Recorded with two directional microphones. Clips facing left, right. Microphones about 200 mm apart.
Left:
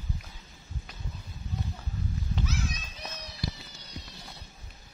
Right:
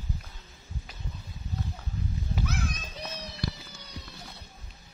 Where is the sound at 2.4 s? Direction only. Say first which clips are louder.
Right 1 dB; 55° right (ahead or behind).